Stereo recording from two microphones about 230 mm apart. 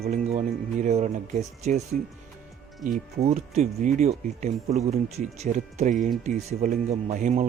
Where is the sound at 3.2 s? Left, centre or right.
Right.